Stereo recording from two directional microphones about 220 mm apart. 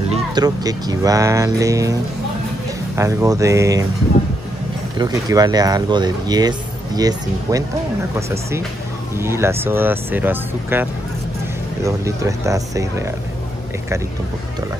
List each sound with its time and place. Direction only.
0.1 s speech: 20° right (ahead or behind)
3.0 s speech: 15° right (ahead or behind)
4.9 s speech: 15° right (ahead or behind)
9.1 s speech: 10° right (ahead or behind)